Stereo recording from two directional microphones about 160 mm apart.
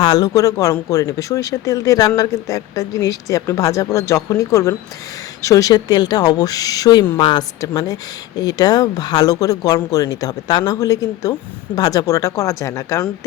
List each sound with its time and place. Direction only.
0.0 s speech: 25° left (ahead or behind)